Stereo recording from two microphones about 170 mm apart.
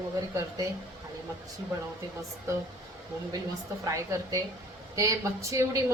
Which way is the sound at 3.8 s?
20° right (ahead or behind).